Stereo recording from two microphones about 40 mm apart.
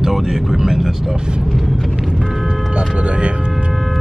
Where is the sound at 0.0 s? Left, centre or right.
Centre.